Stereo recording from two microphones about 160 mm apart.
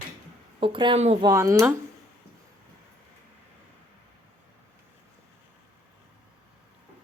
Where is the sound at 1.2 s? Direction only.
20° right (ahead or behind).